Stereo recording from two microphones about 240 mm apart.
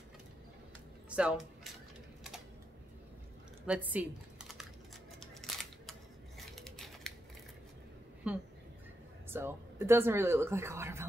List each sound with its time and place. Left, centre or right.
1.1 s speech: centre
3.6 s computer keyboard: centre
5.2 s camera: centre
8.3 s speech: centre